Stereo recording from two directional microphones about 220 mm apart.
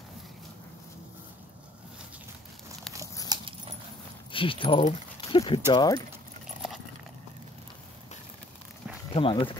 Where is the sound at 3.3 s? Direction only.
20° right (ahead or behind).